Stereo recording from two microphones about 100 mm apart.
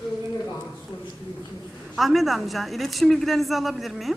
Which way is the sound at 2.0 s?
Centre (ahead or behind).